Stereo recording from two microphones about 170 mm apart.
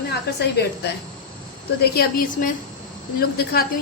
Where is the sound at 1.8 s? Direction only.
65° left (ahead or behind).